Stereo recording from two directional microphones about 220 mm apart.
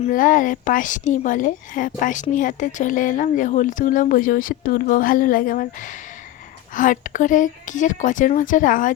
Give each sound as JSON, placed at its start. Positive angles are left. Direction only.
{"t": 0.0, "sound": "speech", "side_deg": 40}